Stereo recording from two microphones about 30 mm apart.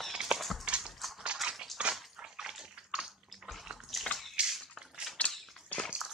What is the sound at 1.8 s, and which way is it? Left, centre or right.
Dog, right.